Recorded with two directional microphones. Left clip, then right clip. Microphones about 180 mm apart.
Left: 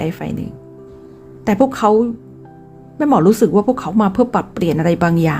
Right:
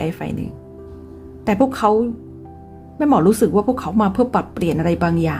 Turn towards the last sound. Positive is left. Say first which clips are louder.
# left 3 dB
turn(degrees=15)  # may be behind; listen again after turning